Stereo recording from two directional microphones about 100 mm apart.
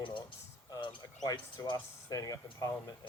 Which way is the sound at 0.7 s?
50° left (ahead or behind).